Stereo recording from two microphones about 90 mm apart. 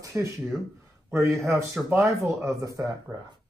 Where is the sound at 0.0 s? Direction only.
35° right (ahead or behind).